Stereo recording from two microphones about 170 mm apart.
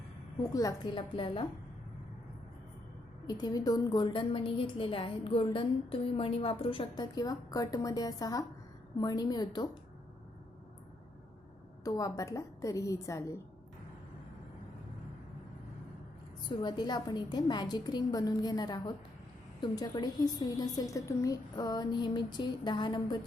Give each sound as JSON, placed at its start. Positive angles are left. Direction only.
{"t": 0.5, "sound": "a woman's voice", "side_deg": 20}
{"t": 3.2, "sound": "a woman's voice", "side_deg": 20}
{"t": 11.8, "sound": "a woman's voice", "side_deg": 20}
{"t": 16.5, "sound": "a woman's voice", "side_deg": 25}